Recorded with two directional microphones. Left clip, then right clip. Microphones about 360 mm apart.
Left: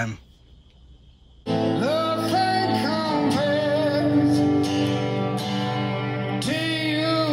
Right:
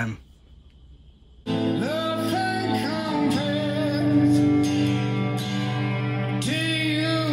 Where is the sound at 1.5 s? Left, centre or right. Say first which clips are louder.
Left 3 dB; centre.